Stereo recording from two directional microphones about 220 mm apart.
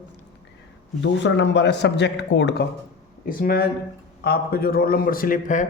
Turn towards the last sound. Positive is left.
turn(degrees=35)  # may be behind; listen again after turning